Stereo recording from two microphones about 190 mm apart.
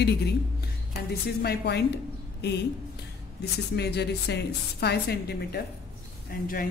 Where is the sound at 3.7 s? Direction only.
60° left (ahead or behind).